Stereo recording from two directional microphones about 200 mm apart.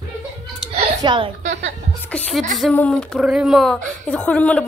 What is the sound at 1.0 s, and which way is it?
Speech, 25° right (ahead or behind).